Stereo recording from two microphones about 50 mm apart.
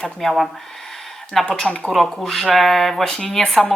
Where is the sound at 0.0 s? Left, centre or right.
Centre.